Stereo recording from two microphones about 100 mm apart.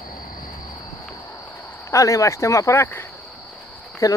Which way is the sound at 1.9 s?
30° left (ahead or behind).